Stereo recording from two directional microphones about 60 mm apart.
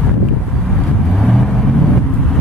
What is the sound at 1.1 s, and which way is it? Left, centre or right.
Vehicle, centre.